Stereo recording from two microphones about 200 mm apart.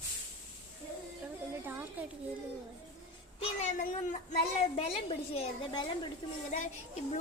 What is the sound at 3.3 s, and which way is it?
Cat, 35° left (ahead or behind).